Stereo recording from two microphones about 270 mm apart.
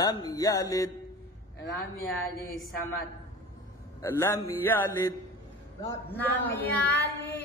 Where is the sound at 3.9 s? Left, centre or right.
Centre.